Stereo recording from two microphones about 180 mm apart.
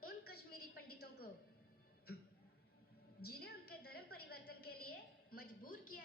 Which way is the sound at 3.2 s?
60° left (ahead or behind).